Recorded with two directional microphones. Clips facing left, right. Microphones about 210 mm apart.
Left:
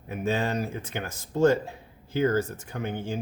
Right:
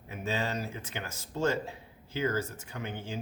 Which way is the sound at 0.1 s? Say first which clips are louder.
Left 6 dB; 55° left (ahead or behind).